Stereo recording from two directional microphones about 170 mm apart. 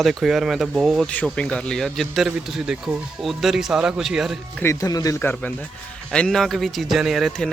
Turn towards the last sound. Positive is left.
turn(degrees=0)  # may be behind; listen again after turning